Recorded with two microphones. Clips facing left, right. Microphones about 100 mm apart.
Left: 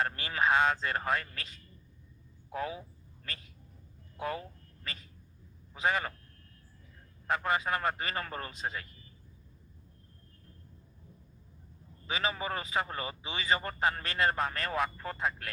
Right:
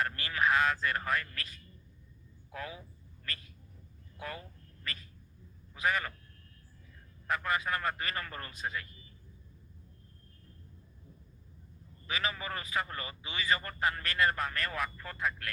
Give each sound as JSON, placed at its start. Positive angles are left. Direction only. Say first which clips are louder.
{"t": 0.0, "sound": "a man's voice", "louder": "left 1 dB", "side_deg": 25}
{"t": 4.2, "sound": "a man's voice", "louder": "left 6 dB", "side_deg": 25}
{"t": 7.3, "sound": "a man's voice", "louder": "left 2 dB", "side_deg": 25}
{"t": 12.0, "sound": "a man's voice", "louder": "left 3 dB", "side_deg": 25}